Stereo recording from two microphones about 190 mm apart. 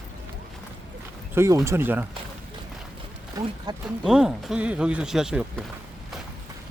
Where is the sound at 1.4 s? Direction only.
15° right (ahead or behind).